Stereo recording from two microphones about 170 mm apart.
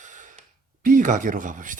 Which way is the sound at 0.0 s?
50° right (ahead or behind).